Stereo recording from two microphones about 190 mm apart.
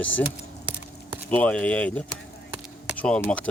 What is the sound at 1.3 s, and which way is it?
Speech, 5° left (ahead or behind).